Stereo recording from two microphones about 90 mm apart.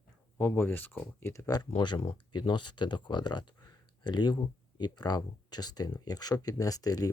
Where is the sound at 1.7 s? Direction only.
75° left (ahead or behind).